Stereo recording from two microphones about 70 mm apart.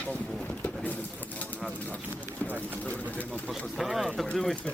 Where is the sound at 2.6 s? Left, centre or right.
Left.